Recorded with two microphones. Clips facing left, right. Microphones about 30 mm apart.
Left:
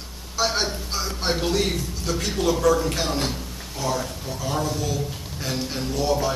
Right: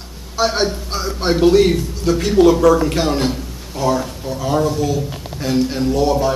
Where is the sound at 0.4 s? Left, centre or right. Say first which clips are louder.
Right 6 dB; centre.